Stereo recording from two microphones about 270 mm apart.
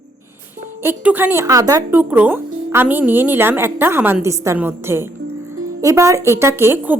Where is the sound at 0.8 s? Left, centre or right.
Centre.